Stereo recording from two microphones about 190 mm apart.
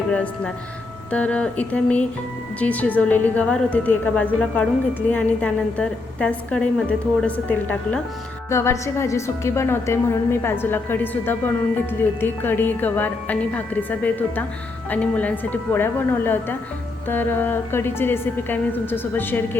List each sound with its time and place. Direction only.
0.1 s a woman's voice: 5° left (ahead or behind)